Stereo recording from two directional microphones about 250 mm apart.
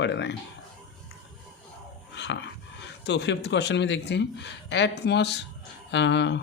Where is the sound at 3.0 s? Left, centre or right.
Left.